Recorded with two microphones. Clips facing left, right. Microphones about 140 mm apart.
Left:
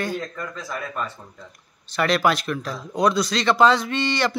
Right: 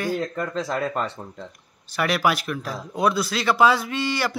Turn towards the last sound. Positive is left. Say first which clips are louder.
# left 2 dB
turn(degrees=-10)  # may be behind; listen again after turning